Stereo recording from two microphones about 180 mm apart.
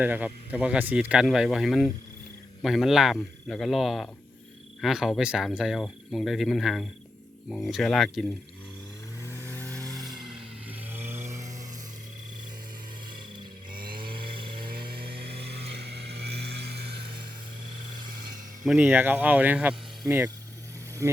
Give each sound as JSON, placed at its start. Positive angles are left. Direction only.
{"t": 0.0, "sound": "speech", "side_deg": -10}
{"t": 9.2, "sound": "vehicle", "side_deg": 15}
{"t": 14.1, "sound": "chainsaw", "side_deg": -55}
{"t": 18.6, "sound": "speech", "side_deg": -5}